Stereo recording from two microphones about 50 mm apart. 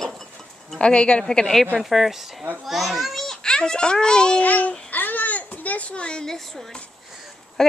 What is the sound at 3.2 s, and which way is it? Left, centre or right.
A child's voice, centre.